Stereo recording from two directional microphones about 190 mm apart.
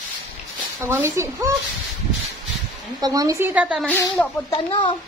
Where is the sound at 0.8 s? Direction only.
15° right (ahead or behind).